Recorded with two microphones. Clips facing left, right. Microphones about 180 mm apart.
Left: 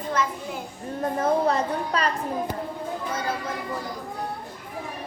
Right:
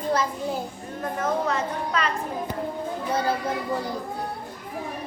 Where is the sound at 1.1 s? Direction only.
35° left (ahead or behind).